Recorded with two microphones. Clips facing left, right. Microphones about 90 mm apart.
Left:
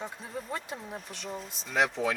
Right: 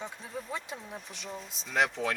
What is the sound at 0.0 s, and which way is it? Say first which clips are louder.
Speech: left 1 dB; centre (ahead or behind).